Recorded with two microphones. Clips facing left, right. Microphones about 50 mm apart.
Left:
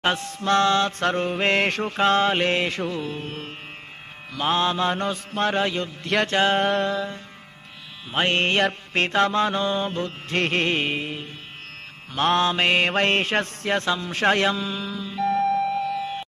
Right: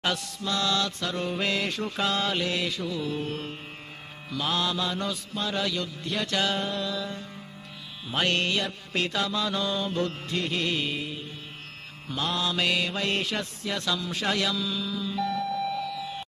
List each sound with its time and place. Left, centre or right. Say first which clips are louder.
0.0 s mantra: left 5 dB; left
0.5 s music: left 8 dB; left
4.3 s mantra: left 6 dB; left
5.6 s mantra: left 5 dB; left
6.6 s music: left 8 dB; left
8.1 s mantra: left 4 dB; left
10.3 s music: left 8 dB; left